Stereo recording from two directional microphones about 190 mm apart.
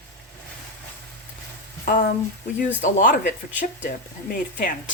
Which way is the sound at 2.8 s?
45° left (ahead or behind).